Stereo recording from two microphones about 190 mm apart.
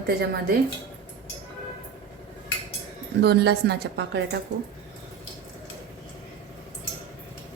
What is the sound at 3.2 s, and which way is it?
A woman's voice, 60° right (ahead or behind).